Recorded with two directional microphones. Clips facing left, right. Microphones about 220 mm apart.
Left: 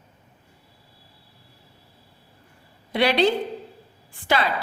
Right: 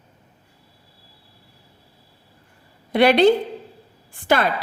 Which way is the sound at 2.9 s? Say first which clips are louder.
Right 6 dB; 50° right (ahead or behind).